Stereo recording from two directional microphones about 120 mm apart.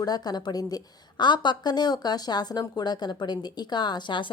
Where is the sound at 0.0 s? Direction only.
35° left (ahead or behind).